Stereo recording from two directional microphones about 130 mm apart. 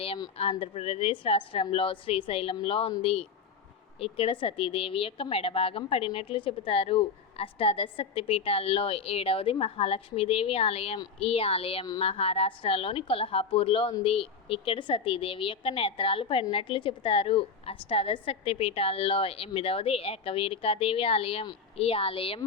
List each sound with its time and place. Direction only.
0.6 s a woman's voice: 50° left (ahead or behind)